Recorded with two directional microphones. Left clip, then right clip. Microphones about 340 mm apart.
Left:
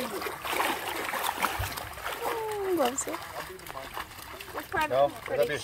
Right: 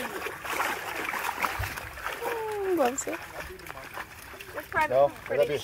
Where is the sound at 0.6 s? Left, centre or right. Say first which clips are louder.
Left 1 dB; left.